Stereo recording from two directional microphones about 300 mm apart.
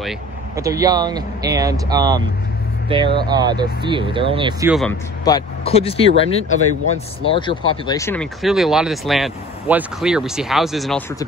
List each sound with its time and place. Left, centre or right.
0.6 s speech: centre
5.2 s speech: centre